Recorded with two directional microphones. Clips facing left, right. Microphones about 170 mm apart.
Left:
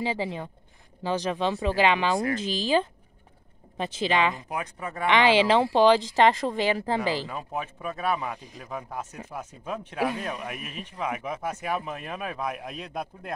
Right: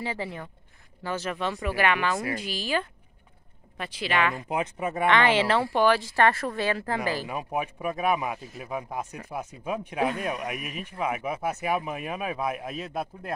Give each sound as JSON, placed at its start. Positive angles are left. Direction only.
{"t": 0.0, "sound": "speech", "side_deg": 15}
{"t": 4.5, "sound": "speech", "side_deg": -20}
{"t": 5.1, "sound": "speech", "side_deg": 15}
{"t": 7.2, "sound": "speech", "side_deg": -15}